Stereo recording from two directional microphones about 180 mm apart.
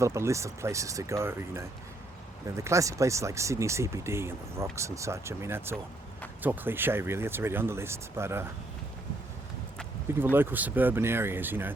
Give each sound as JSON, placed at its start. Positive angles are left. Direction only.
{"t": 0.0, "sound": "speech", "side_deg": -15}
{"t": 10.1, "sound": "speech", "side_deg": -10}